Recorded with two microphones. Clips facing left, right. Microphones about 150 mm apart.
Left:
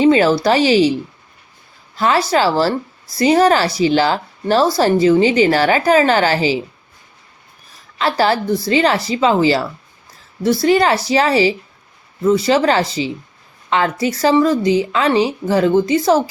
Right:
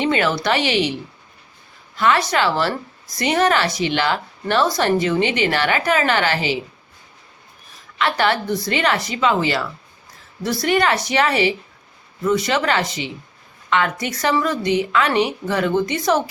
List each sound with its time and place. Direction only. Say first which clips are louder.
0.0 s a woman's voice: left 7 dB; 30° left (ahead or behind)
2.0 s a woman's voice: left 3 dB; 30° left (ahead or behind)
7.9 s a woman's voice: left 3 dB; 35° left (ahead or behind)